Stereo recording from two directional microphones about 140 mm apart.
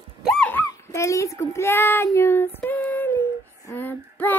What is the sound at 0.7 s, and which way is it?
Child singing, 20° left (ahead or behind).